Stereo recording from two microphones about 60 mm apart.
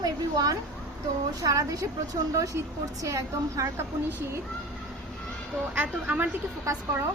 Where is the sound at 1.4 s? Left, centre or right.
Right.